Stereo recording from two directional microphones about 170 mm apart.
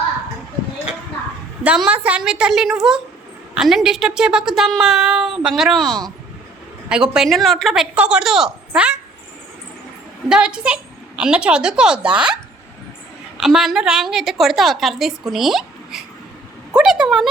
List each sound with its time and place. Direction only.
1.6 s a woman's voice: 5° right (ahead or behind)
10.2 s a woman's voice: 5° right (ahead or behind)